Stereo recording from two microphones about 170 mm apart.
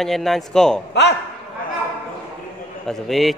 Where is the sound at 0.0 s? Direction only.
Centre (ahead or behind).